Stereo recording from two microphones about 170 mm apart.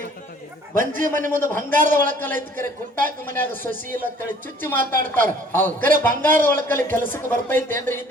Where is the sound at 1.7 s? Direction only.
50° right (ahead or behind).